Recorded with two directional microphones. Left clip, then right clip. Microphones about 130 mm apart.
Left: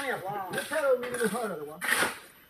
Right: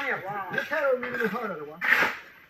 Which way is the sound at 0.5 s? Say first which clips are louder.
Right 4 dB; 35° left (ahead or behind).